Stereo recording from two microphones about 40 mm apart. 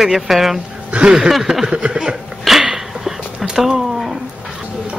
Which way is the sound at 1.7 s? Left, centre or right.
Right.